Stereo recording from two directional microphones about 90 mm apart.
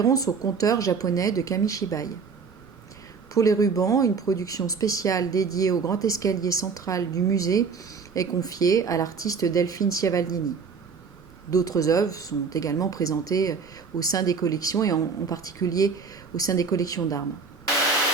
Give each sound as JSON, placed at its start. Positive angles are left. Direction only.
{"t": 0.0, "sound": "speech", "side_deg": 40}
{"t": 3.3, "sound": "speech", "side_deg": 40}
{"t": 11.5, "sound": "speech", "side_deg": 40}